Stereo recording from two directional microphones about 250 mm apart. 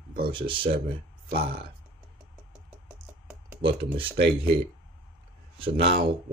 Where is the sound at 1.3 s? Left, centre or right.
Right.